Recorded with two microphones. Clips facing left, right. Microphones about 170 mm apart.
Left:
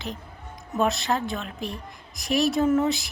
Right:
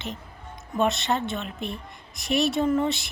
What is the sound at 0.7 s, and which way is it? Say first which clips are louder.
A woman's voice: even; centre (ahead or behind).